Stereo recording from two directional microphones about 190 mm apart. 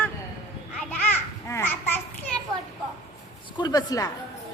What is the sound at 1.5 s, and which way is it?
Babbling, 15° left (ahead or behind).